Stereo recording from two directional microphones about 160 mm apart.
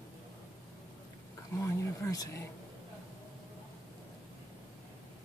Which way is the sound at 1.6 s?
20° left (ahead or behind).